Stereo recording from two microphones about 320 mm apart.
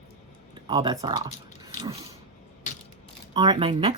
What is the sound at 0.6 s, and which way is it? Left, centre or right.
Speech, centre.